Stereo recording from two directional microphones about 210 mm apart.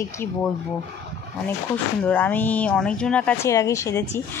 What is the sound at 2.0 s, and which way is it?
Speech, 10° left (ahead or behind).